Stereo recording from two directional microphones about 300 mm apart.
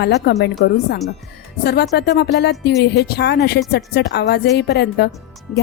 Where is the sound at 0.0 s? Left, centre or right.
Left.